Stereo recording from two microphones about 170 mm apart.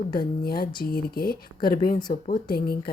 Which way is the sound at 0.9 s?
60° left (ahead or behind).